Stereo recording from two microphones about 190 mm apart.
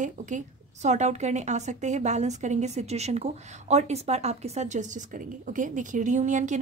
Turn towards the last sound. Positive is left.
turn(degrees=-40)  # may be behind; listen again after turning